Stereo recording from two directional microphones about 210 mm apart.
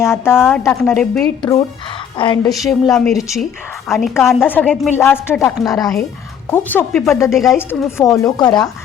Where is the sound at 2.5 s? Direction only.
Centre (ahead or behind); by 8.7 s 20° left (ahead or behind).